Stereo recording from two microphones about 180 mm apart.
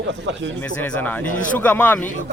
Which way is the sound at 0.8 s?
10° left (ahead or behind).